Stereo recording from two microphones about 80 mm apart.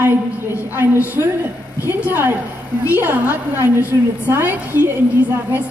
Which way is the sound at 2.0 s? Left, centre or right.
Right.